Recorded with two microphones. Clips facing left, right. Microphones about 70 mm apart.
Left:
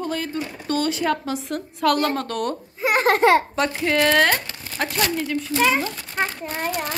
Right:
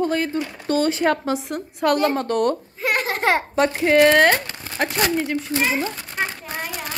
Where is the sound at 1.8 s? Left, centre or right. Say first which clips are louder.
Right 1 dB; right.